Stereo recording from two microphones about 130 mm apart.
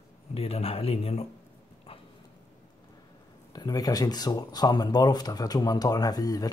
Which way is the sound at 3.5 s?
30° left (ahead or behind).